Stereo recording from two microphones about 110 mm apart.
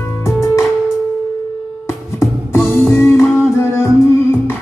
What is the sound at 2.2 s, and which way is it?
Music, 25° left (ahead or behind).